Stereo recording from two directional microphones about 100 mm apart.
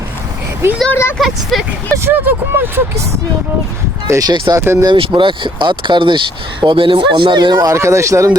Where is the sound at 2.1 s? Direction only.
20° right (ahead or behind); by 4.6 s 40° right (ahead or behind).